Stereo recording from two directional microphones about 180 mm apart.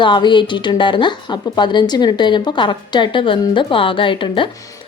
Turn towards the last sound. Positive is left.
turn(degrees=25)  # may be behind; listen again after turning